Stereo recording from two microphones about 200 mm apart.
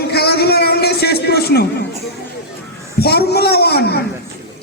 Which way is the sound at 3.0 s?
50° left (ahead or behind).